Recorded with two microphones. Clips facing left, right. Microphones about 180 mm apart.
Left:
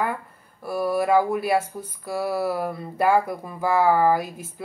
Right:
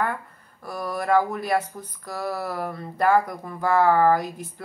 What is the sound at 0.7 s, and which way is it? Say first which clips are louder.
Speech: left 4 dB; 10° left (ahead or behind).